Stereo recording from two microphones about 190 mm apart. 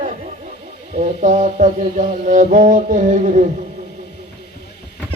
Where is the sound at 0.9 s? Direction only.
35° right (ahead or behind).